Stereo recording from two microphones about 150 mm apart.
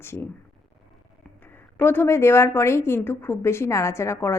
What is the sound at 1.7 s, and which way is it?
A woman's voice, 15° left (ahead or behind).